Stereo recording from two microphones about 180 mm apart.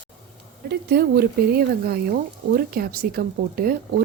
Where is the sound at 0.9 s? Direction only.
60° right (ahead or behind).